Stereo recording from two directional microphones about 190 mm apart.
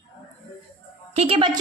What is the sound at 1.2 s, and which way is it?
Speech, 30° right (ahead or behind).